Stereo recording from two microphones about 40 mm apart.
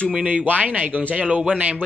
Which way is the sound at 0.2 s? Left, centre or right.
Right.